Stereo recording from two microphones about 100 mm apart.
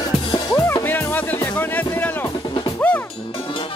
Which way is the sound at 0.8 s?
20° left (ahead or behind).